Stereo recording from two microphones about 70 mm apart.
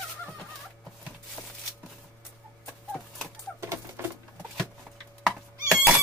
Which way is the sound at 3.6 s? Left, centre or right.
Right.